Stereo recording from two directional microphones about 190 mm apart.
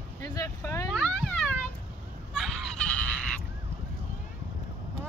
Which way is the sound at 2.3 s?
Centre (ahead or behind).